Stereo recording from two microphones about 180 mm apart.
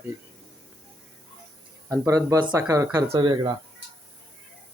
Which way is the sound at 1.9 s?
20° right (ahead or behind).